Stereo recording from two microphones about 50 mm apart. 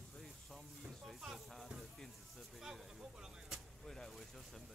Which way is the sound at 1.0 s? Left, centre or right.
Centre.